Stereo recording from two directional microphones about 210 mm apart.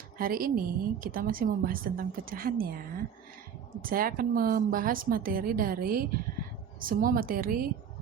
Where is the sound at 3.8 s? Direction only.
45° right (ahead or behind).